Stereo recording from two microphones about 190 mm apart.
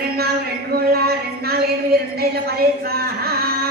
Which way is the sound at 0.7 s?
55° right (ahead or behind).